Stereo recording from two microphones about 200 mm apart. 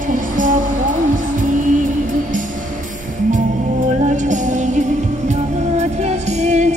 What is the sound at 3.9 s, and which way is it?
Music, 35° right (ahead or behind).